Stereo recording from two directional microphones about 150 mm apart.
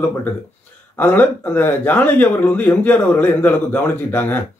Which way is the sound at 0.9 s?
15° left (ahead or behind).